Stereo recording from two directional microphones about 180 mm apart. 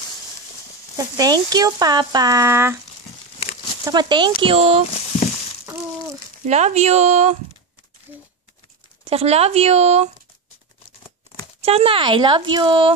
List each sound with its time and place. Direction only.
0.9 s speech: 20° right (ahead or behind)
3.8 s speech: 25° right (ahead or behind)
6.4 s speech: 40° right (ahead or behind)
9.0 s speech: 35° right (ahead or behind)
11.6 s speech: 30° right (ahead or behind)